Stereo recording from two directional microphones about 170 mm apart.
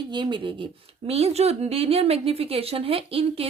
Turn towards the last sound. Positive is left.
turn(degrees=-35)  # may be behind; listen again after turning